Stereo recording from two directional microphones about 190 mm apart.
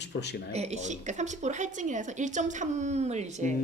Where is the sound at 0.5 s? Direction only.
35° right (ahead or behind).